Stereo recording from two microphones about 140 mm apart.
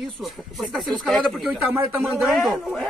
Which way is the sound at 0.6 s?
Centre (ahead or behind).